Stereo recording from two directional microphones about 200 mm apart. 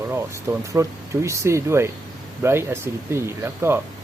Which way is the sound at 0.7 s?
15° right (ahead or behind).